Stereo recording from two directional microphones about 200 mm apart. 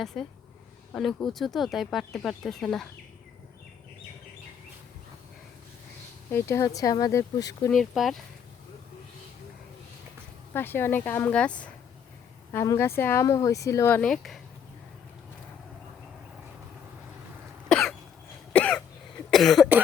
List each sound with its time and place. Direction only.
0.0 s speech: centre (ahead or behind)
6.3 s speech: 15° left (ahead or behind)
7.7 s speech: centre (ahead or behind)
10.5 s speech: 10° left (ahead or behind)
17.7 s cough: centre (ahead or behind)